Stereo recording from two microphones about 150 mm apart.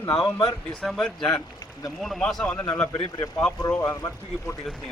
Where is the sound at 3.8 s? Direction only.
25° left (ahead or behind).